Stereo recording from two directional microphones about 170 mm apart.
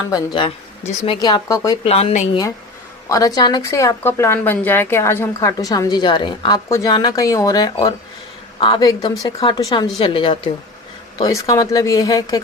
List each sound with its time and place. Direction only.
0.1 s speech: 30° left (ahead or behind)
1.8 s a woman's voice: 35° left (ahead or behind)
3.1 s speech: 20° left (ahead or behind)
11.2 s speech: 20° left (ahead or behind)